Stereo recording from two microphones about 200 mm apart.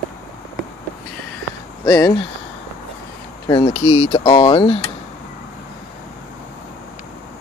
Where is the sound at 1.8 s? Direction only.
20° left (ahead or behind).